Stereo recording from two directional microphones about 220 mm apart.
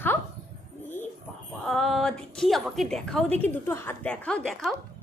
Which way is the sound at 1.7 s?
Centre (ahead or behind).